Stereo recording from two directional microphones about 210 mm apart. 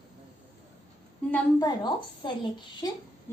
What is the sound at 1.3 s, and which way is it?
A child's voice, 20° left (ahead or behind).